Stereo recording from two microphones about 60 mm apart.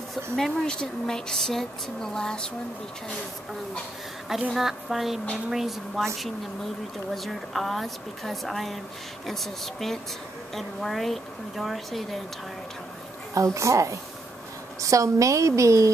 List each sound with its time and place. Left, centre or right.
0.1 s speech: centre
4.6 s speech: centre
7.2 s speech: centre
13.3 s a woman's voice: right